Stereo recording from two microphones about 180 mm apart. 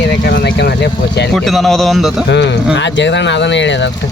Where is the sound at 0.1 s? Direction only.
80° left.